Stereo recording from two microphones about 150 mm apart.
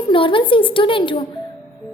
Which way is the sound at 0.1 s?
35° left (ahead or behind).